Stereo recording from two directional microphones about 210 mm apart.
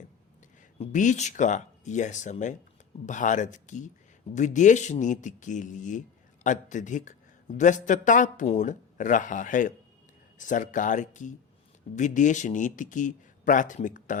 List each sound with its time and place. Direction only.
0.8 s a man's voice: 35° left (ahead or behind)